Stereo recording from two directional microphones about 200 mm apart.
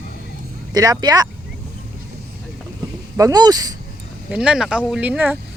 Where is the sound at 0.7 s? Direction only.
20° right (ahead or behind).